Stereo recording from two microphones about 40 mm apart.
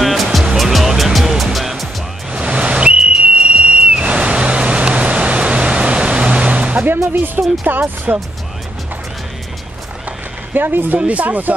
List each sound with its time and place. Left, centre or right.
0.0 s music: centre
2.3 s a sound: right
3.6 s whistle: right
6.9 s music: right
7.7 s speech: right
8.1 s speech: right
10.5 s speech: right
11.0 s speech: right